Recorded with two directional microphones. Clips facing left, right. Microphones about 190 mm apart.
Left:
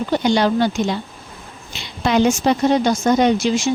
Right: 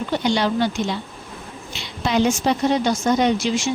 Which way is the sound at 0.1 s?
45° left (ahead or behind).